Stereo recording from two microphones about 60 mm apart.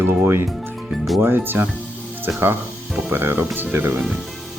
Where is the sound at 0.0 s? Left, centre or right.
Right.